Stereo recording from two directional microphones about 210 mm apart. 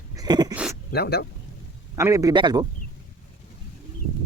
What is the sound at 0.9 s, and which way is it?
Speech, 50° left (ahead or behind).